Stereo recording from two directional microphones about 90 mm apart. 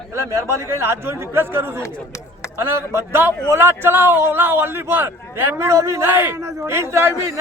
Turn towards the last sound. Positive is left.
turn(degrees=-30)  # may be behind; listen again after turning